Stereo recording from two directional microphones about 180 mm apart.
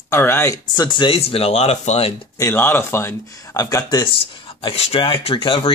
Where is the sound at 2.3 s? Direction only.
15° left (ahead or behind).